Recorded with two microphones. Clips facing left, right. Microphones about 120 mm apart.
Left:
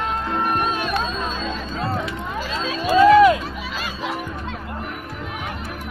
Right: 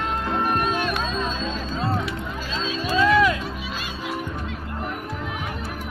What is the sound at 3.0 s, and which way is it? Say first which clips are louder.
Music: left 7 dB; 40° left (ahead or behind).